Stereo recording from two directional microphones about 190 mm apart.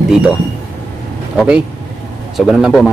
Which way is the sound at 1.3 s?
5° right (ahead or behind).